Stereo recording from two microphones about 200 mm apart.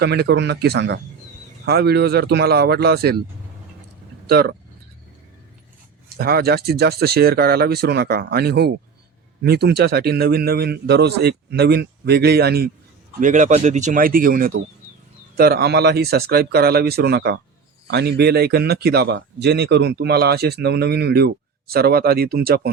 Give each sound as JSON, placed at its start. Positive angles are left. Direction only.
{"t": 0.0, "sound": "a man's voice", "side_deg": -55}
{"t": 4.3, "sound": "a man's voice", "side_deg": -50}
{"t": 6.1, "sound": "a man's voice", "side_deg": -50}
{"t": 13.1, "sound": "a man's voice", "side_deg": -40}